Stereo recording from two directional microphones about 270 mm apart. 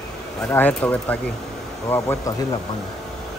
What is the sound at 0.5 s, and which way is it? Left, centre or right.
Speech, centre.